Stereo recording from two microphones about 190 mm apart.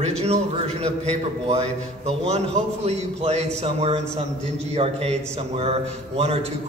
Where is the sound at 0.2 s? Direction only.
35° right (ahead or behind).